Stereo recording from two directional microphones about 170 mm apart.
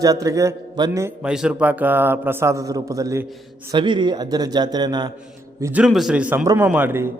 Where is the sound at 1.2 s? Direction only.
5° right (ahead or behind); by 5.1 s 25° right (ahead or behind).